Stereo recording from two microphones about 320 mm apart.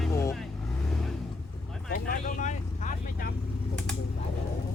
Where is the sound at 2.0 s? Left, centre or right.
Left.